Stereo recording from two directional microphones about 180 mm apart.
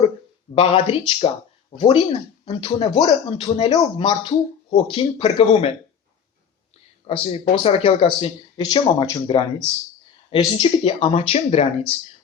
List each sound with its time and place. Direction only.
0.5 s speech: 30° left (ahead or behind)
7.1 s speech: 30° left (ahead or behind)